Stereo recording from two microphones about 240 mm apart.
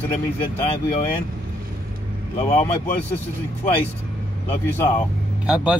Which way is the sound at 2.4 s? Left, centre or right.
Left.